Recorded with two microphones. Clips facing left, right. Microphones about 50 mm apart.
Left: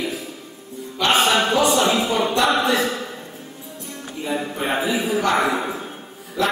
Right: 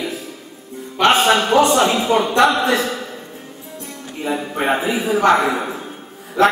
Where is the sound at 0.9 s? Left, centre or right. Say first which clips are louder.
Right 4 dB; right.